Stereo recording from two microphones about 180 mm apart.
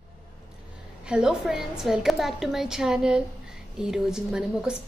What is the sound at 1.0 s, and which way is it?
A woman's voice, 5° right (ahead or behind).